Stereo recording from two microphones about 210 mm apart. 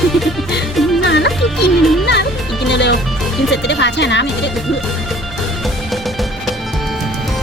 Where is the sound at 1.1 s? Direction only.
55° left (ahead or behind).